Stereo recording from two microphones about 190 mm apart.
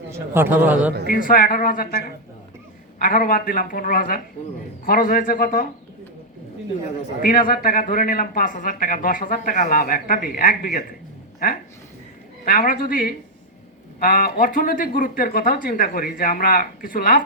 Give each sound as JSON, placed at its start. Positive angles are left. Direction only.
{"t": 0.1, "sound": "a man's voice", "side_deg": -10}
{"t": 1.0, "sound": "speech", "side_deg": 45}
{"t": 7.2, "sound": "speech", "side_deg": 50}
{"t": 12.5, "sound": "speech", "side_deg": 50}